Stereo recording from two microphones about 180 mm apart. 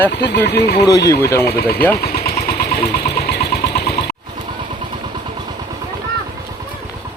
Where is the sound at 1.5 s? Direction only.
60° left (ahead or behind).